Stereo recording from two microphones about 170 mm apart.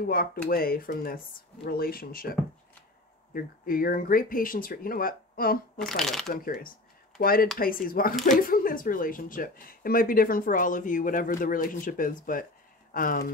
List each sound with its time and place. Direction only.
0.0 s speech: 60° left (ahead or behind)
3.3 s speech: 55° left (ahead or behind)
5.8 s speech: centre (ahead or behind)
6.3 s speech: 50° left (ahead or behind)